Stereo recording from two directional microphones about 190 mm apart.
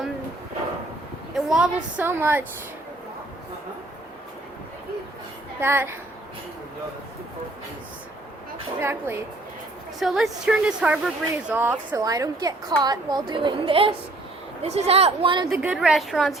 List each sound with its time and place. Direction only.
1.4 s a woman's voice: centre (ahead or behind)
5.5 s a woman's voice: 10° right (ahead or behind)
8.8 s a woman's voice: 15° right (ahead or behind)
10.0 s a woman's voice: centre (ahead or behind); by 15.4 s 25° right (ahead or behind)
15.4 s a woman's voice: 5° right (ahead or behind)